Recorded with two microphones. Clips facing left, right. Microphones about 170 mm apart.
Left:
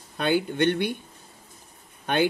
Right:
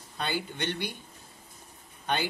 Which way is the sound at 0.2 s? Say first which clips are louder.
Left 10 dB; 55° left (ahead or behind).